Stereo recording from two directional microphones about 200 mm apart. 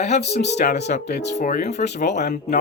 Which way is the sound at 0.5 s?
40° left (ahead or behind).